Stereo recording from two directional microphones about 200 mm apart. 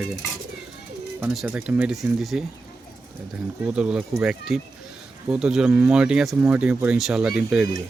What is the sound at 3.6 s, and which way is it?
Speech, 5° right (ahead or behind).